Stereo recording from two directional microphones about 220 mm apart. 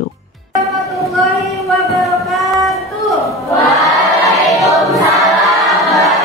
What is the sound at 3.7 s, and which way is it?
Choir, centre (ahead or behind).